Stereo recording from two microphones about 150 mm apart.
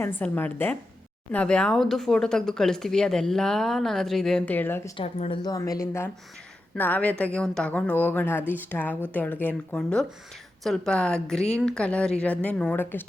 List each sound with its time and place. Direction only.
0.0 s speech: 15° left (ahead or behind)
4.9 s speech: 40° left (ahead or behind)
5.4 s speech: 25° left (ahead or behind)